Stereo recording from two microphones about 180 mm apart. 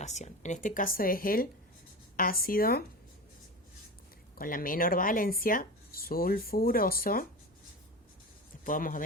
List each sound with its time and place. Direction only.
0.0 s speech: 40° left (ahead or behind); by 2.8 s 55° left (ahead or behind)
4.4 s speech: 50° left (ahead or behind)
8.6 s speech: 50° left (ahead or behind)